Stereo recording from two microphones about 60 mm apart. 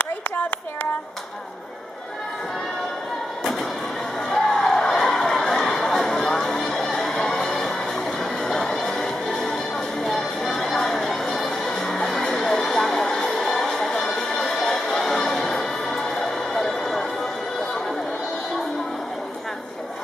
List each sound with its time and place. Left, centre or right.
0.0 s a sound: left
4.3 s crowd: centre
8.2 s music: centre